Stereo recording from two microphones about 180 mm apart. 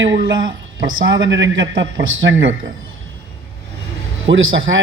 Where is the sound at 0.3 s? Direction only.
25° right (ahead or behind).